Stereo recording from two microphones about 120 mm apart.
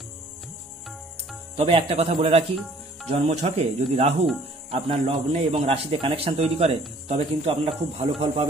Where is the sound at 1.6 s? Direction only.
50° right (ahead or behind).